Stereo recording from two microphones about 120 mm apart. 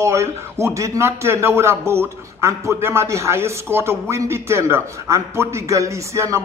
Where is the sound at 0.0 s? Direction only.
25° right (ahead or behind).